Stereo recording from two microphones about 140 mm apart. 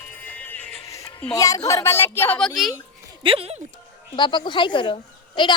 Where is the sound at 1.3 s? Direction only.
25° left (ahead or behind).